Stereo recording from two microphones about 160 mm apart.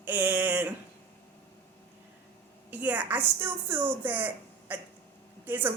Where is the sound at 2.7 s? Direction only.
10° right (ahead or behind).